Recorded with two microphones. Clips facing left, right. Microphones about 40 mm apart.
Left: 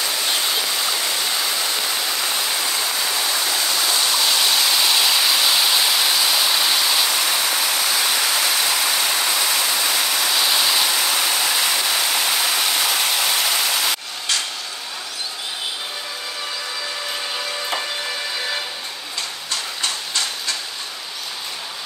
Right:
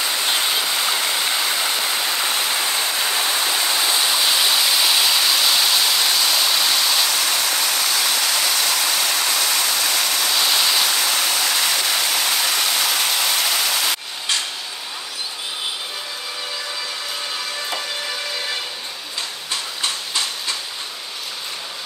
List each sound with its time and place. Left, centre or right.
0.0 s waterfall: centre